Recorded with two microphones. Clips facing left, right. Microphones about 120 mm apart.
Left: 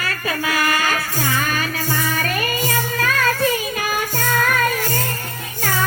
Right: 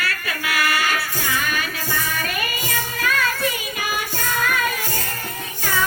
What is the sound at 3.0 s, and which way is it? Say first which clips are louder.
Music: left 2 dB; 40° left (ahead or behind).